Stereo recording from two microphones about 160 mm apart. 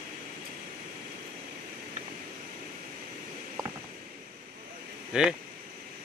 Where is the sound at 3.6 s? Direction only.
20° right (ahead or behind).